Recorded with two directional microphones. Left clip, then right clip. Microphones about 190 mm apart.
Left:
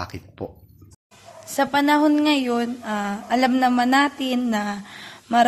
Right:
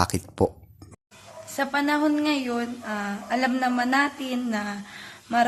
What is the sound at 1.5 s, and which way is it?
A woman's voice, 40° left (ahead or behind).